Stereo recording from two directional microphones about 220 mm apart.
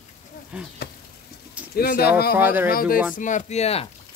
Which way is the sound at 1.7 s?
45° left (ahead or behind).